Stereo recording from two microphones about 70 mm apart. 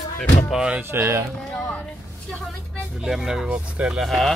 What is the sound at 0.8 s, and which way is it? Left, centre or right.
Speech, right.